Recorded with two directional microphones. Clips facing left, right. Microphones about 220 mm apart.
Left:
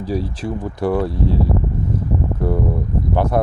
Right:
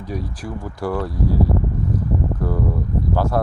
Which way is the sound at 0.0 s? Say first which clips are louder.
Left 6 dB; 30° left (ahead or behind).